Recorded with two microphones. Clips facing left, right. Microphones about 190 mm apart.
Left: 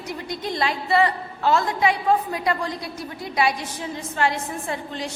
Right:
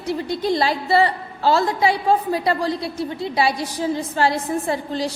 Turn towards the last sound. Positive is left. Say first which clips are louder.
# right 6 dB
turn(degrees=-35)  # may be behind; listen again after turning